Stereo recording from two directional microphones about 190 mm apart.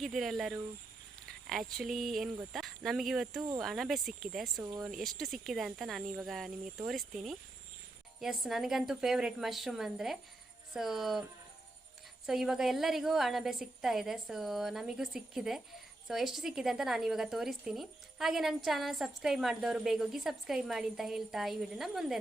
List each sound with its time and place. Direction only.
0.0 s a woman's voice: centre (ahead or behind)
4.5 s speech: 15° right (ahead or behind)
4.9 s a woman's voice: centre (ahead or behind)